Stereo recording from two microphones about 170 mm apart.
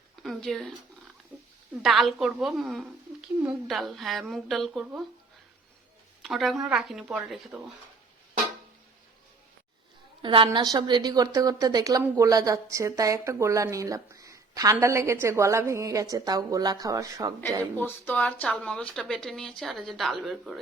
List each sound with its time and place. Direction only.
0.2 s a sound: centre (ahead or behind)
1.8 s a woman's voice: centre (ahead or behind)
6.2 s a woman's voice: centre (ahead or behind)
10.2 s a woman's voice: 30° right (ahead or behind)
17.7 s a woman's voice: 10° left (ahead or behind)